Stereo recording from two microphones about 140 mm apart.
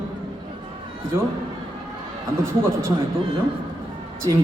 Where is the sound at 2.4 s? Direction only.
20° right (ahead or behind).